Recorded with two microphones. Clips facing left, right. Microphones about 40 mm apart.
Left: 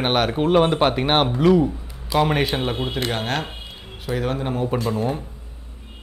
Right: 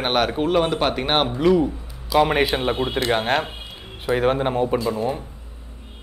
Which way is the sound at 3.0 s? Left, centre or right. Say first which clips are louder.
Right 4 dB; right.